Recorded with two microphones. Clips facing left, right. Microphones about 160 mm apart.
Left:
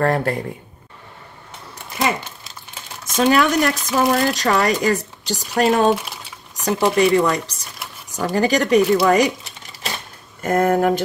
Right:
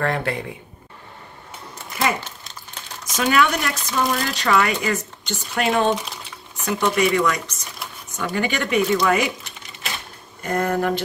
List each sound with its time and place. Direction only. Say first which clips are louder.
0.0 s speech: left 4 dB; 40° left (ahead or behind)
3.2 s speech: left 4 dB; 35° left (ahead or behind)
5.9 s speech: left 4 dB; 5° left (ahead or behind)
6.6 s speech: left 4 dB; 35° left (ahead or behind)
10.4 s speech: left 5 dB; 45° left (ahead or behind)